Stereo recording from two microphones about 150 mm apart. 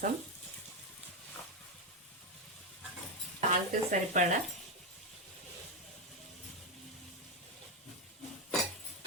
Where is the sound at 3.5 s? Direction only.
55° right (ahead or behind).